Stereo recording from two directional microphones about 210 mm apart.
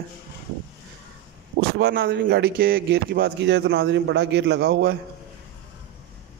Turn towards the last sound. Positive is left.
turn(degrees=-50)  # may be behind; listen again after turning